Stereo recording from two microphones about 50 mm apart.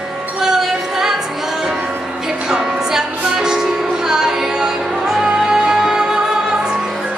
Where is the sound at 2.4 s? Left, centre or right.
Centre.